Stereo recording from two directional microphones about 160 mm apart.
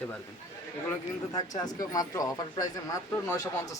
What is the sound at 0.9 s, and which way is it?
Speech, 25° left (ahead or behind).